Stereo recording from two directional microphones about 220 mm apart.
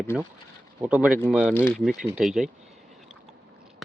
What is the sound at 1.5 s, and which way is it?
Speech, 5° left (ahead or behind).